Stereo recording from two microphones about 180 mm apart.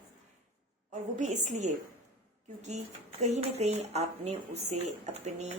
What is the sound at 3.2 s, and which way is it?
Speech, 35° right (ahead or behind).